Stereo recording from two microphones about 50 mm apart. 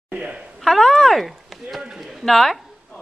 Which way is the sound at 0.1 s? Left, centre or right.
Centre.